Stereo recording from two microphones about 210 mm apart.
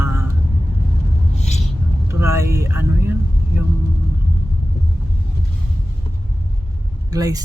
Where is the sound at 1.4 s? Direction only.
30° left (ahead or behind).